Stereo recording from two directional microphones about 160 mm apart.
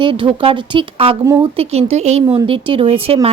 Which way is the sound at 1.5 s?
40° right (ahead or behind).